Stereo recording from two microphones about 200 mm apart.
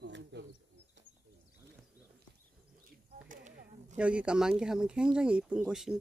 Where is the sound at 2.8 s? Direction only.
45° right (ahead or behind).